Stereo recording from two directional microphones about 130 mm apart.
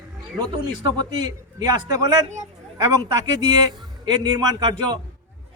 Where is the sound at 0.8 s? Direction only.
30° right (ahead or behind).